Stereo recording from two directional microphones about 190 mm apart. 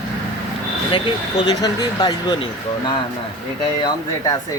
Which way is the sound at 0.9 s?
25° left (ahead or behind).